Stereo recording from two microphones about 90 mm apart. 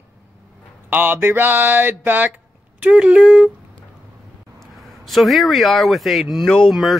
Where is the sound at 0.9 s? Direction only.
20° right (ahead or behind).